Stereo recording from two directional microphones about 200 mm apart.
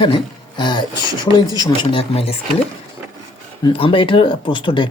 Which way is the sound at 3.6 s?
25° left (ahead or behind).